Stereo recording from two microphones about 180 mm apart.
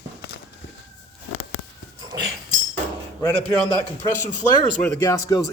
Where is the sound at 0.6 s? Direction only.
75° left (ahead or behind).